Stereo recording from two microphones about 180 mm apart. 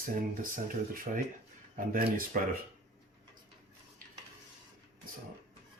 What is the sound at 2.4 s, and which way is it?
Speech, 50° right (ahead or behind).